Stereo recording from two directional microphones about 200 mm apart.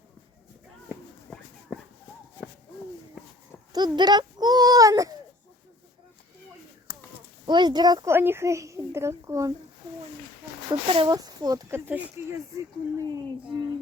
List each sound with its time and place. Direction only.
1.3 s clip-clop: 5° left (ahead or behind)
1.7 s horse: centre (ahead or behind)
3.7 s a sound: 20° right (ahead or behind)
6.9 s a sound: 50° left (ahead or behind)
7.4 s speech: 20° right (ahead or behind)
10.7 s speech: 25° right (ahead or behind)